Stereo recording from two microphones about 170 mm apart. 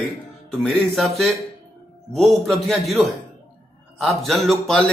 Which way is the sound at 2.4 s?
Centre (ahead or behind).